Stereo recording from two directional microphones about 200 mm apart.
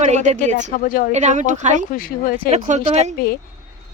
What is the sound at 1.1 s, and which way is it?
Speech, 35° right (ahead or behind).